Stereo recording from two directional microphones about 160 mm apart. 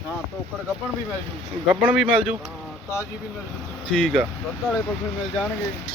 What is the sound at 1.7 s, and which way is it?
Speech, 5° right (ahead or behind).